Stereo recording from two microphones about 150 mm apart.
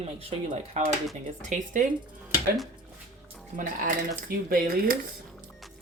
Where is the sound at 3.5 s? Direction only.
65° right (ahead or behind).